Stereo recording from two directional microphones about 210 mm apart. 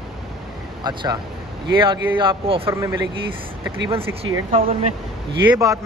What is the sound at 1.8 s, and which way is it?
Speech, 25° right (ahead or behind).